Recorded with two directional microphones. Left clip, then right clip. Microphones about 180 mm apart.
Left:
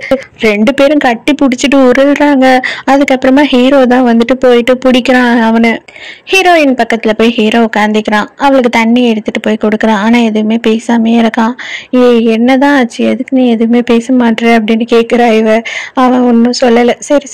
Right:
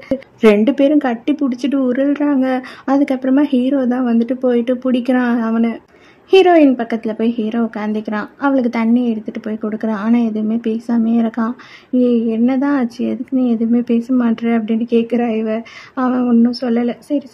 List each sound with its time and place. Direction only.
0.4 s a woman's voice: 25° left (ahead or behind)